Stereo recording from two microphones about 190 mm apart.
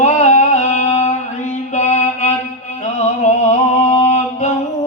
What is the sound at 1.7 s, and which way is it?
Music, 35° left (ahead or behind).